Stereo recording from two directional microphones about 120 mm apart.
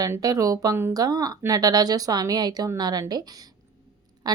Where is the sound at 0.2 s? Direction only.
30° right (ahead or behind).